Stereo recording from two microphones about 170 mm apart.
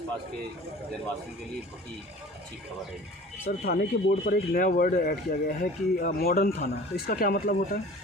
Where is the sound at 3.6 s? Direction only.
65° left (ahead or behind).